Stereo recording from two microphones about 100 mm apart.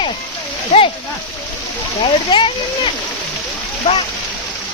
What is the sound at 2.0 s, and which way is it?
Speech, 60° left (ahead or behind).